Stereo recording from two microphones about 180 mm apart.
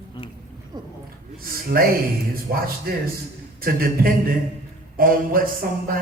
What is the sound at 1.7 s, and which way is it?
Speech, 55° right (ahead or behind).